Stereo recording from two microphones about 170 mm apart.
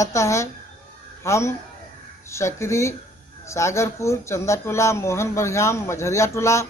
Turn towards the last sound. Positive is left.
turn(degrees=15)  # may be behind; listen again after turning